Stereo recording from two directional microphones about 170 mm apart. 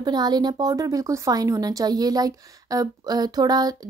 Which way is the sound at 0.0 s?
25° right (ahead or behind).